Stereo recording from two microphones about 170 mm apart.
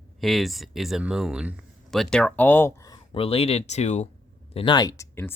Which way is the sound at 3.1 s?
35° left (ahead or behind).